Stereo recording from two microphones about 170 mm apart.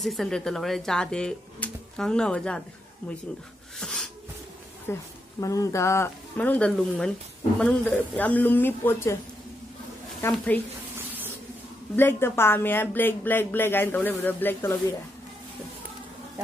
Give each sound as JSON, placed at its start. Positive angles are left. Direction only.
{"t": 0.0, "sound": "speech", "side_deg": 0}
{"t": 3.8, "sound": "a sound", "side_deg": 5}
{"t": 4.9, "sound": "speech", "side_deg": 15}
{"t": 10.2, "sound": "speech", "side_deg": 10}
{"t": 11.9, "sound": "speech", "side_deg": 10}